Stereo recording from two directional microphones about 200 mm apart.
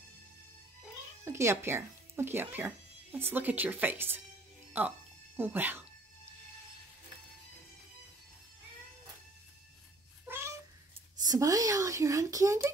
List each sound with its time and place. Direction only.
1.2 s speech: 15° right (ahead or behind)
5.4 s speech: 10° right (ahead or behind)
10.2 s cat: 10° right (ahead or behind)
11.1 s speech: 20° right (ahead or behind)